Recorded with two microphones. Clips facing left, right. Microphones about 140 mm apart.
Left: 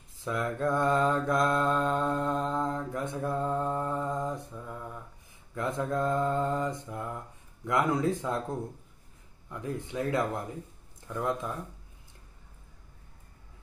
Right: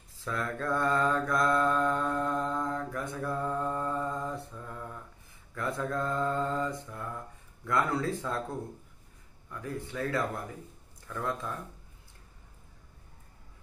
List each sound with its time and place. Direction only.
0.2 s mantra: 15° left (ahead or behind)
5.5 s mantra: 20° left (ahead or behind)
7.6 s speech: 15° left (ahead or behind)
9.5 s mantra: 20° left (ahead or behind)
11.1 s speech: 20° left (ahead or behind)